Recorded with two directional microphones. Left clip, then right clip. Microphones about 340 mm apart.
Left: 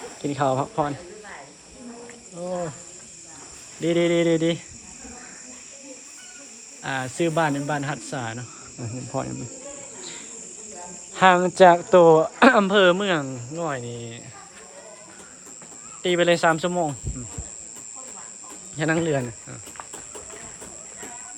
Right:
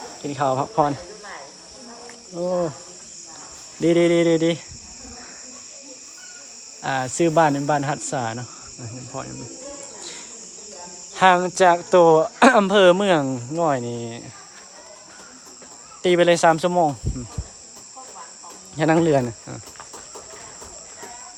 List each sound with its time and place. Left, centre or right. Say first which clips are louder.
0.2 s speech: right 1 dB; centre
2.4 s cricket: right 6 dB; centre
3.8 s speech: right 4 dB; centre
6.8 s speech: right 4 dB; centre
8.8 s cricket: left 4 dB; centre
11.1 s speech: right 1 dB; centre
16.0 s speech: right 4 dB; centre
18.8 s speech: right 6 dB; centre